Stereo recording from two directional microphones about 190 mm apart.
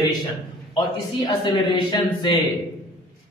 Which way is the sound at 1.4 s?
25° left (ahead or behind).